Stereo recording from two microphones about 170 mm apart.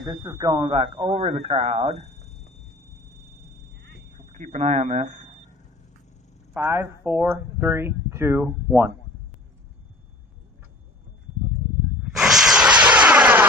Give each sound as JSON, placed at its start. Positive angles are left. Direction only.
{"t": 0.0, "sound": "speech", "side_deg": -20}
{"t": 0.6, "sound": "speech", "side_deg": -30}
{"t": 2.0, "sound": "a sound", "side_deg": 40}
{"t": 4.4, "sound": "speech", "side_deg": -45}
{"t": 6.5, "sound": "speech", "side_deg": -10}
{"t": 12.2, "sound": "a sound", "side_deg": 0}